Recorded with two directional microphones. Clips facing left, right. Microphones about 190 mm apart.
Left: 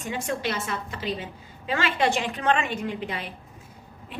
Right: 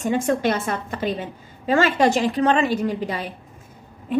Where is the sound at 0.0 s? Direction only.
45° right (ahead or behind).